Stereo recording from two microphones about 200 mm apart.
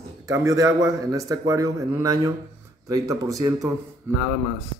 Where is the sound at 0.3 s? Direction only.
15° right (ahead or behind).